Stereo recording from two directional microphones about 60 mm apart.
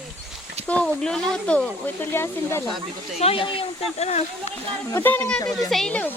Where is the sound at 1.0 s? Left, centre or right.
Centre.